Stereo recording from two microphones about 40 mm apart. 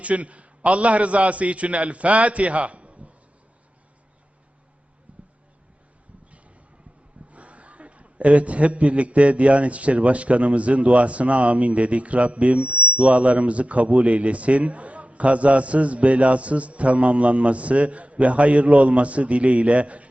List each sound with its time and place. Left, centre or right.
0.0 s a man's voice: right
5.1 s a sound: right
7.3 s a man's voice: right